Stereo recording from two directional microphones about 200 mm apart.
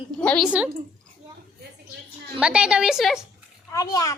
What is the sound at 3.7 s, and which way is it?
Speech, 15° left (ahead or behind).